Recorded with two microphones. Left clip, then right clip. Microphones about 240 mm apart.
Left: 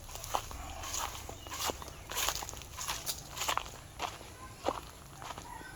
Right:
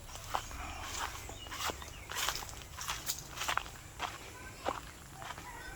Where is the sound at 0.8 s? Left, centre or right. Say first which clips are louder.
Left 2 dB; left.